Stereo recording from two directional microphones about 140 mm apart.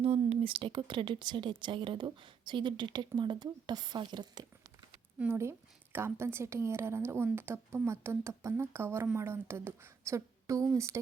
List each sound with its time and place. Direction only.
0.0 s speech: 45° right (ahead or behind)
5.2 s a woman's voice: 20° right (ahead or behind)